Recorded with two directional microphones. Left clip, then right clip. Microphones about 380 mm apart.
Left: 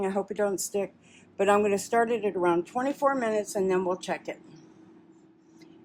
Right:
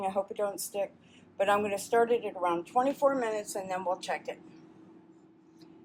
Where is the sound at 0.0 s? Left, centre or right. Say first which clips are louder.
Left 3 dB; left.